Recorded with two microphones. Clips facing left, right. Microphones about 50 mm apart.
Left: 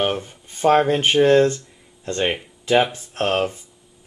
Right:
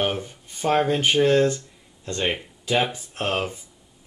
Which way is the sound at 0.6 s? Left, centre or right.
Centre.